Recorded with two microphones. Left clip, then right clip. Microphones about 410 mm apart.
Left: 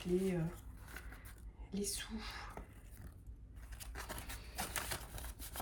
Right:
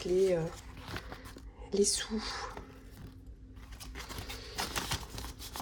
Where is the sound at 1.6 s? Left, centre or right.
Centre.